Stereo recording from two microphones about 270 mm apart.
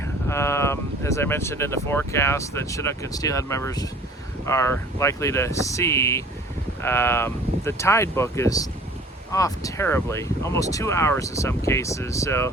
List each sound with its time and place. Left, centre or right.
0.3 s speech: centre